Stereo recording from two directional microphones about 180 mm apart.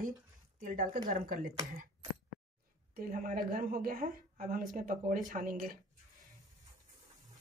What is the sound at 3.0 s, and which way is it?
Speech, 50° right (ahead or behind).